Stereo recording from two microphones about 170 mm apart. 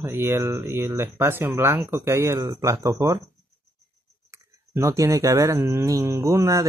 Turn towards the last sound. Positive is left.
turn(degrees=-20)  # may be behind; listen again after turning